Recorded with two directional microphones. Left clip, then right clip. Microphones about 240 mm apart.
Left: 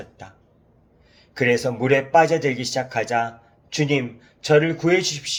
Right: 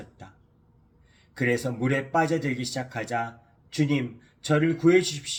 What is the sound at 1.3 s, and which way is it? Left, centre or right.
Speech, centre.